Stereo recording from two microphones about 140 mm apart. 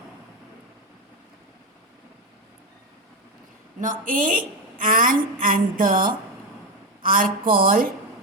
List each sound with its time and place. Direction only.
3.8 s a woman's voice: 70° right (ahead or behind); by 7.9 s 90° right